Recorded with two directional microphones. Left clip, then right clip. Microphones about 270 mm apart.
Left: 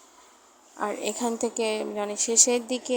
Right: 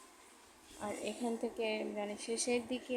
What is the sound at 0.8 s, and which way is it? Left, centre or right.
Speech, left.